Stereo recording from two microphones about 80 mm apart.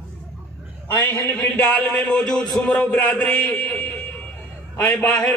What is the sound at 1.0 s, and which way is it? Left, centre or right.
Speech, left.